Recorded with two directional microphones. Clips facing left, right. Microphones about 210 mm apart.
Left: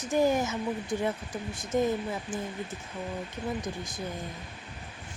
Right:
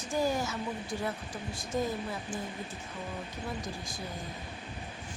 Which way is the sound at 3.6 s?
20° left (ahead or behind).